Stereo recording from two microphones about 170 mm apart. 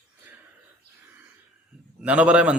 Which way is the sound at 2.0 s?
5° right (ahead or behind).